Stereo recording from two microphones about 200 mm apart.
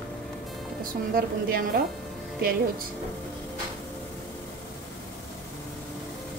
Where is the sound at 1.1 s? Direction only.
45° right (ahead or behind).